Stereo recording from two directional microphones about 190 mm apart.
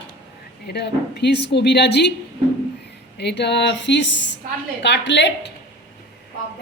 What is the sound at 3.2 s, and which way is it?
A woman's voice, 65° left (ahead or behind).